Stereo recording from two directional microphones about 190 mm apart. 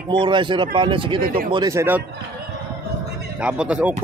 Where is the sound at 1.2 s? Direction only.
50° right (ahead or behind).